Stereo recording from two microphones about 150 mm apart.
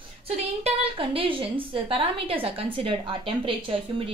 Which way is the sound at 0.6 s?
35° right (ahead or behind).